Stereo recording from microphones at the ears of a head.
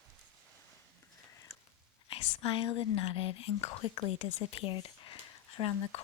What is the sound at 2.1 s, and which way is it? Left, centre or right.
Speech, left.